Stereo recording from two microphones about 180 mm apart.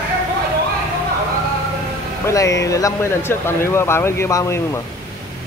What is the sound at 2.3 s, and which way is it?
Speech, 15° left (ahead or behind).